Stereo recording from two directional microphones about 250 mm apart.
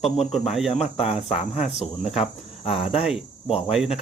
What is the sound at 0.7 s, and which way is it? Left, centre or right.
Speech, left.